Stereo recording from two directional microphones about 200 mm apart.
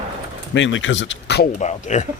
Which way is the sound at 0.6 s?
70° left (ahead or behind).